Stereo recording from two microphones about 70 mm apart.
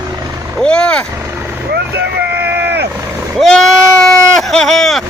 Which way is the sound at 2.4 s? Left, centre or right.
Right.